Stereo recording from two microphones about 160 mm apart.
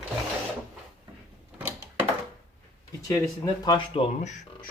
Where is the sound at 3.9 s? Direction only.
45° left (ahead or behind).